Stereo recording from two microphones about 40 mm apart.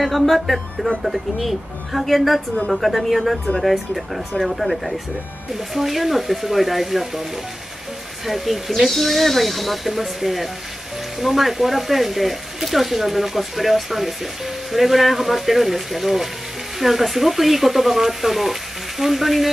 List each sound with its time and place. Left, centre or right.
0.0 s speech: centre
2.5 s speech: left
2.8 s speech: centre
5.5 s speech: centre
8.3 s speech: centre